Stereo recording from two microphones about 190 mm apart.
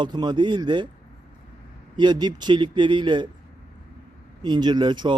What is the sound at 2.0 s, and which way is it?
Speech, 25° right (ahead or behind).